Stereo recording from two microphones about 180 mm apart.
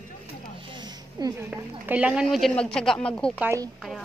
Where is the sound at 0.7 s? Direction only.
20° right (ahead or behind).